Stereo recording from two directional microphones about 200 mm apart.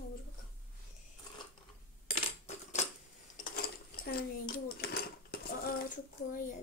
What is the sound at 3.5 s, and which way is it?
Dishes, 50° left (ahead or behind).